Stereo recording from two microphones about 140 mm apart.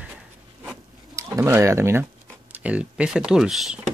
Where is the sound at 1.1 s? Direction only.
20° right (ahead or behind).